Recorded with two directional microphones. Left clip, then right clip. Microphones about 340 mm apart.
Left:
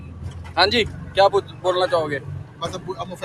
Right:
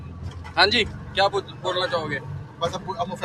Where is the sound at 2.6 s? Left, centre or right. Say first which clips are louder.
Right 2 dB; right.